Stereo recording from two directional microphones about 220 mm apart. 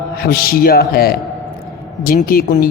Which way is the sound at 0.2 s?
45° left (ahead or behind).